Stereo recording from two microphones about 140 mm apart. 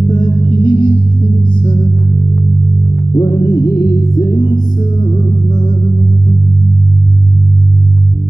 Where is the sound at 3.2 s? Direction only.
30° left (ahead or behind).